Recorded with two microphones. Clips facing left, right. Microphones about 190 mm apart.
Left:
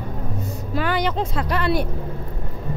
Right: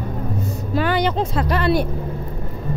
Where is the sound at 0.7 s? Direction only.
30° right (ahead or behind).